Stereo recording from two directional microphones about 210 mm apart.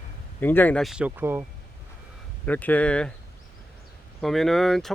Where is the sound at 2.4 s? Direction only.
10° left (ahead or behind).